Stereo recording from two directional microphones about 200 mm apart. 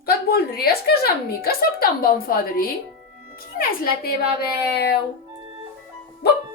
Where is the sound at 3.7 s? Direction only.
50° left (ahead or behind).